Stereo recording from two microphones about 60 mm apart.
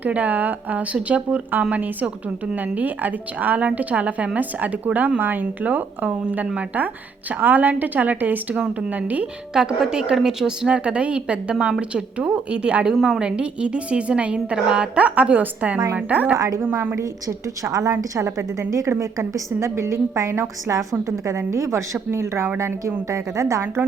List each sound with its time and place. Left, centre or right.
0.0 s a woman's voice: right
9.6 s a woman's voice: centre
12.9 s a woman's voice: centre
13.2 s a woman's voice: centre; by 16.9 s right
16.9 s a woman's voice: right
18.1 s a woman's voice: right
21.2 s a woman's voice: right
22.1 s a woman's voice: right